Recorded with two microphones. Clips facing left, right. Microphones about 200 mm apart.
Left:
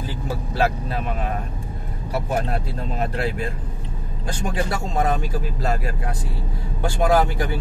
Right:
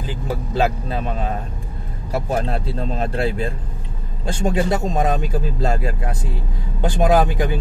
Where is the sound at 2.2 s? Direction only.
30° right (ahead or behind).